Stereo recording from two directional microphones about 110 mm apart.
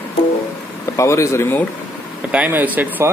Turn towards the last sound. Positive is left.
turn(degrees=-15)  # may be behind; listen again after turning